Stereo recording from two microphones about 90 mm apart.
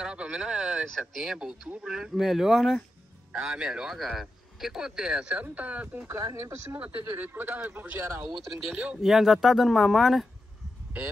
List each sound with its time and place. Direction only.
0.0 s speech: 10° right (ahead or behind)
6.0 s speech: 35° right (ahead or behind)
6.8 s speech: 20° right (ahead or behind)
9.0 s speech: centre (ahead or behind)